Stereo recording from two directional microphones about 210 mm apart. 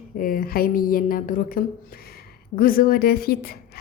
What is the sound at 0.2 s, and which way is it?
A woman's voice, 45° left (ahead or behind).